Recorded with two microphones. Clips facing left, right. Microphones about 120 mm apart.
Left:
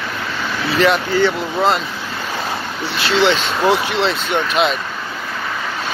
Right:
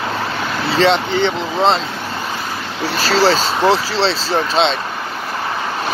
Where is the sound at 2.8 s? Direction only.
40° right (ahead or behind).